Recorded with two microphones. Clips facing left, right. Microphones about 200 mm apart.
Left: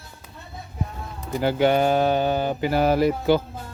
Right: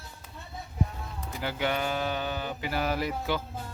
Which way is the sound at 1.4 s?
35° left (ahead or behind).